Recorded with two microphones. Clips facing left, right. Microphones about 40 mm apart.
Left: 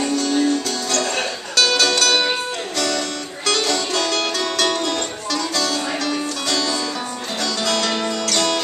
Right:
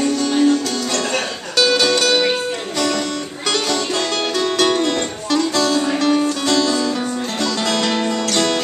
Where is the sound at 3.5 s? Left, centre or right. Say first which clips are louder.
Even; centre.